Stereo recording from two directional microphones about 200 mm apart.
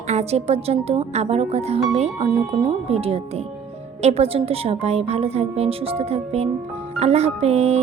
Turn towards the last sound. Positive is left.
turn(degrees=-30)  # may be behind; listen again after turning